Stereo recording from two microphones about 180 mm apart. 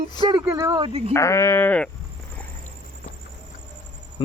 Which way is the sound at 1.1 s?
15° left (ahead or behind).